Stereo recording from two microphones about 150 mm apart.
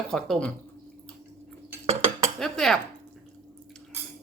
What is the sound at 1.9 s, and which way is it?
Cutlery, 45° right (ahead or behind).